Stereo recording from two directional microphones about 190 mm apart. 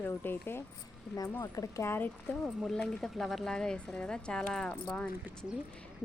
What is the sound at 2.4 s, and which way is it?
Speech, centre (ahead or behind).